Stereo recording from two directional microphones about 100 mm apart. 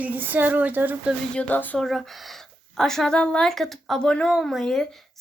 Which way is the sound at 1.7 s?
5° left (ahead or behind).